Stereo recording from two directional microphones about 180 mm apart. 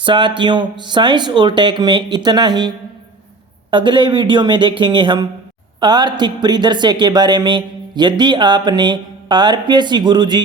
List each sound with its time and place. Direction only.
0.0 s speech: 25° right (ahead or behind)